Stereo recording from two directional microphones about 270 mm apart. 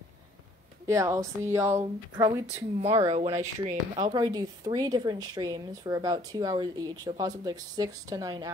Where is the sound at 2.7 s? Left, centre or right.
Right.